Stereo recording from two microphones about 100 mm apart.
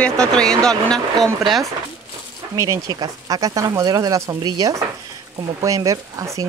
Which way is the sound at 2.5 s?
30° right (ahead or behind).